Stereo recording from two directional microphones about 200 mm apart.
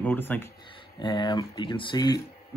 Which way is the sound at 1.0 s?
20° left (ahead or behind).